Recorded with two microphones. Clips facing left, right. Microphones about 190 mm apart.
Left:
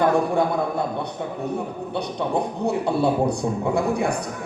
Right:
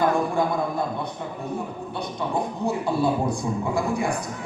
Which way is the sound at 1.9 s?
65° left (ahead or behind).